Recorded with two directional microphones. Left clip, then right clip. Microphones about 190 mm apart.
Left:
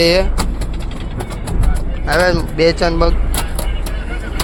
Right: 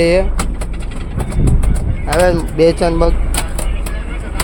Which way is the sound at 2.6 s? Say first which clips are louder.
Right 2 dB; 30° right (ahead or behind).